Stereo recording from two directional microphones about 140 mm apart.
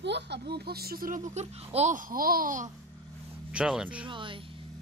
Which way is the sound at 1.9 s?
80° right.